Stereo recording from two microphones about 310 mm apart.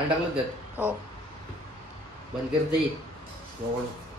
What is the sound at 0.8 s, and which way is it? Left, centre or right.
Speech, centre.